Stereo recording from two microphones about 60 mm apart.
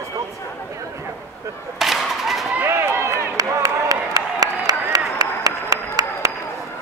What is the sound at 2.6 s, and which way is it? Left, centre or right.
Run, right.